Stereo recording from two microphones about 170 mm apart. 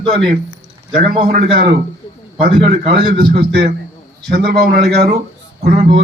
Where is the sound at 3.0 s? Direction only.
60° right (ahead or behind).